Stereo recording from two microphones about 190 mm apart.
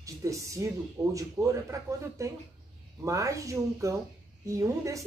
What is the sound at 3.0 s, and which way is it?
Speech, 15° right (ahead or behind).